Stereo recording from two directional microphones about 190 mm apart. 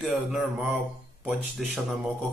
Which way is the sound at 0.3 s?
Centre (ahead or behind).